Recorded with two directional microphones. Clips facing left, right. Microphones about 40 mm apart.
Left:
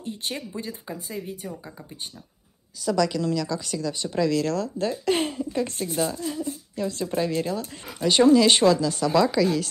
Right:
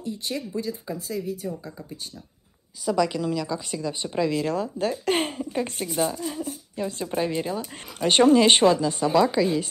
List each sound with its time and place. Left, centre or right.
0.0 s speech: left
0.5 s speech: left
2.8 s speech: centre; by 5.3 s right
5.4 s speech: right
8.0 s speech: right; by 9.7 s centre